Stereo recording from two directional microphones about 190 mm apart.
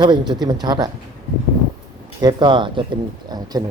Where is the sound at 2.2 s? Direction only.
25° right (ahead or behind).